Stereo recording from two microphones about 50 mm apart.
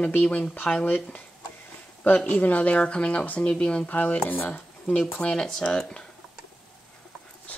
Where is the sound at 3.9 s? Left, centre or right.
Left; by 6.1 s centre.